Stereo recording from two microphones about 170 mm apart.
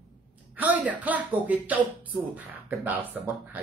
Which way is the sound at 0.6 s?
10° right (ahead or behind).